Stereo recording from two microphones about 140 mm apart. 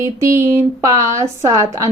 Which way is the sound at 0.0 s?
20° right (ahead or behind).